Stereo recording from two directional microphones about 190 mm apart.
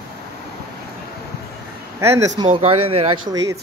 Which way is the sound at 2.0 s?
15° right (ahead or behind).